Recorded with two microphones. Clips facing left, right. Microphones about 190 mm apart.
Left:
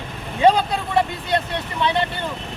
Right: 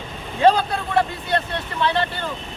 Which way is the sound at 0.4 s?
15° left (ahead or behind).